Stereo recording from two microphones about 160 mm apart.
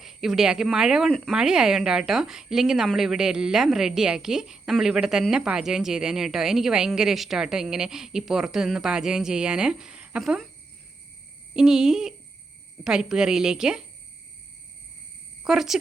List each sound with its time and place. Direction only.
0.0 s speech: centre (ahead or behind)
11.5 s speech: 5° right (ahead or behind)
15.4 s speech: 5° right (ahead or behind)